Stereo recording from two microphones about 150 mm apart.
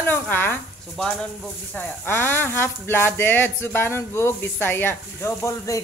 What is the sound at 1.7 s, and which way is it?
Speech, 15° left (ahead or behind).